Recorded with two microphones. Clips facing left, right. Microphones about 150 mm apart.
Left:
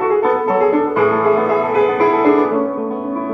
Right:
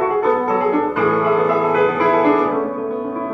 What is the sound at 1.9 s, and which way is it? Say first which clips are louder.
Music: left 2 dB; 35° left (ahead or behind).